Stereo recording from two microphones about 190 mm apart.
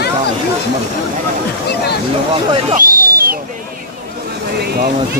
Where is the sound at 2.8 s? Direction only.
50° right (ahead or behind).